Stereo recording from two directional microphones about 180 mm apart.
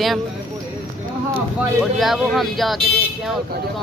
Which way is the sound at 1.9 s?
Centre (ahead or behind).